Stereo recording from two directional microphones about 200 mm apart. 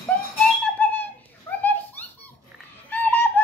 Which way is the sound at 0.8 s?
10° left (ahead or behind).